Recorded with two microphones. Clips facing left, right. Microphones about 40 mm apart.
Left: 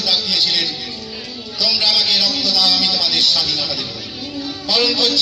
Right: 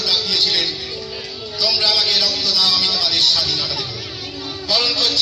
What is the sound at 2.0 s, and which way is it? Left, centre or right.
A man's voice, left.